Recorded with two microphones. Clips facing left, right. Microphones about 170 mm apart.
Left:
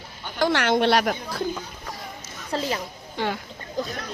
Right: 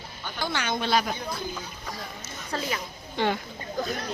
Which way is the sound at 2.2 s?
30° left (ahead or behind).